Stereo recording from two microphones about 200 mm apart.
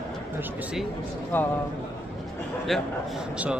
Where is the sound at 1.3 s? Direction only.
10° left (ahead or behind).